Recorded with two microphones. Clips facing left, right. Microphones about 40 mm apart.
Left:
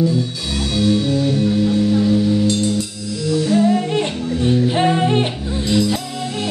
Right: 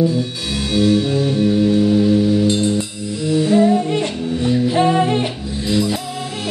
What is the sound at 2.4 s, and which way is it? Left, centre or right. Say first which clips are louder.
Music: right 1 dB; right.